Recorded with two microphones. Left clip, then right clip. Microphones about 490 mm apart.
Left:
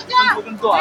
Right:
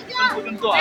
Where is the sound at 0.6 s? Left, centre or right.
Right.